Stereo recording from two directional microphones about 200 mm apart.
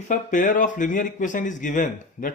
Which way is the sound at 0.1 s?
40° left (ahead or behind).